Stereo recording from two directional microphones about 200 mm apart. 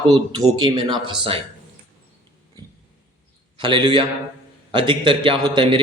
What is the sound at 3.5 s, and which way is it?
A man's voice, 25° right (ahead or behind).